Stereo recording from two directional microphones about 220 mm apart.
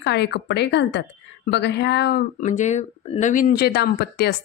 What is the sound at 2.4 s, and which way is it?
Speech, 35° left (ahead or behind).